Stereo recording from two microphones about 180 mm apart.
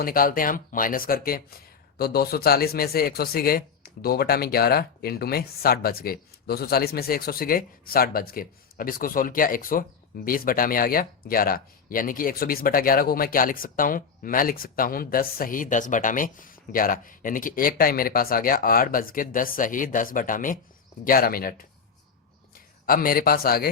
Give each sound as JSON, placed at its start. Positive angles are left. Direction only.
{"t": 0.0, "sound": "a man's voice", "side_deg": 55}